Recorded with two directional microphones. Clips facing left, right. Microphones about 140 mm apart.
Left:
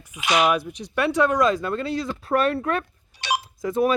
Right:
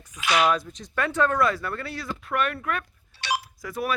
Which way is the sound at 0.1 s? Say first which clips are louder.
Left 2 dB; 20° left (ahead or behind).